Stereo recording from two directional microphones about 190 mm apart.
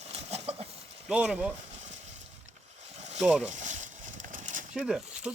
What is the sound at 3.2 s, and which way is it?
Speech, 5° right (ahead or behind).